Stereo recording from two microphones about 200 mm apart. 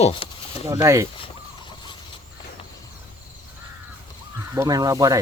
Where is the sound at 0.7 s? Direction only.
15° right (ahead or behind).